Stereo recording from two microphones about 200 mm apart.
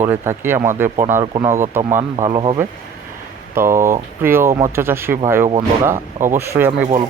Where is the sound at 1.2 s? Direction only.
25° right (ahead or behind).